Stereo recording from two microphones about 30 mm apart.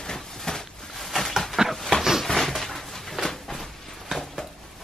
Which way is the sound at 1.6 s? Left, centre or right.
Centre.